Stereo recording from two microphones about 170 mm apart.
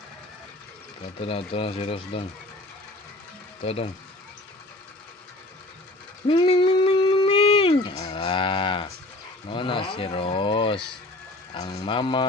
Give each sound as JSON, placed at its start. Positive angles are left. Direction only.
{"t": 1.2, "sound": "speech", "side_deg": 30}
{"t": 3.6, "sound": "speech", "side_deg": 35}
{"t": 6.2, "sound": "a sound", "side_deg": 30}
{"t": 9.5, "sound": "speech", "side_deg": 30}